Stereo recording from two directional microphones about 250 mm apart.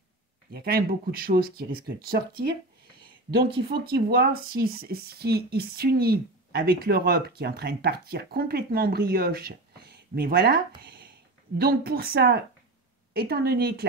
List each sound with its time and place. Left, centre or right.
0.5 s speech: right
10.8 s a sound: right
11.5 s speech: right